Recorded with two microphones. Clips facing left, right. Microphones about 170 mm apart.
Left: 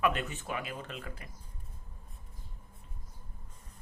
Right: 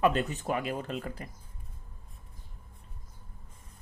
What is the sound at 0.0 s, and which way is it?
Speech, 35° right (ahead or behind).